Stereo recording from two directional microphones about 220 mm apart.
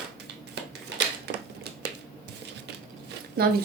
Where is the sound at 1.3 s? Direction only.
50° right (ahead or behind).